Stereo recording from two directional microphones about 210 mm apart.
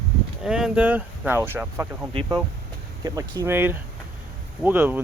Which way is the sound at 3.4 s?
10° right (ahead or behind).